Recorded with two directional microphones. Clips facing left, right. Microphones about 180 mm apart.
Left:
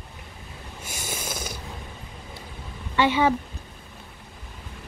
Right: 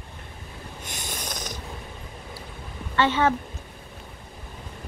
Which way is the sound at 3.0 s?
10° left (ahead or behind).